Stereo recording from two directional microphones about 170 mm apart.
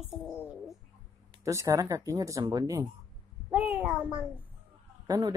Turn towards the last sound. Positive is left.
turn(degrees=-20)  # may be behind; listen again after turning